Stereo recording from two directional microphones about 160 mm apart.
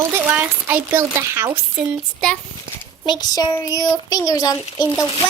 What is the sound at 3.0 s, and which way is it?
Speech, 25° left (ahead or behind).